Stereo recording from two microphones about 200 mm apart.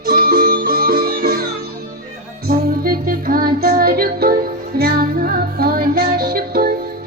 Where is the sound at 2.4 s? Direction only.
45° right (ahead or behind).